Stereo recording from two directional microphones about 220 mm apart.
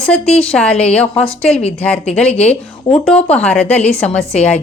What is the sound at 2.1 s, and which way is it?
Speech, 5° left (ahead or behind).